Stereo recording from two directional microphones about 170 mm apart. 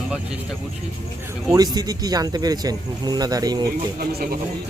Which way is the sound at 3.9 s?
60° right (ahead or behind).